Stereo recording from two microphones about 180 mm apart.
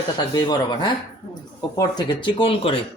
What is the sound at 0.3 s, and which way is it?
Speech, 25° left (ahead or behind).